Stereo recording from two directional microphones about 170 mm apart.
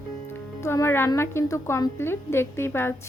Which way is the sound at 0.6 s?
15° left (ahead or behind).